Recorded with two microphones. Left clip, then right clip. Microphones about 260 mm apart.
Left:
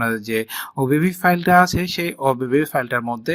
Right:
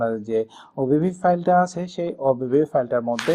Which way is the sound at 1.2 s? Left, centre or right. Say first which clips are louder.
Left 3 dB; left.